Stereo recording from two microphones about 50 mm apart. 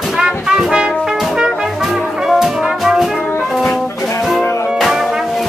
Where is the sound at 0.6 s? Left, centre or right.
Centre.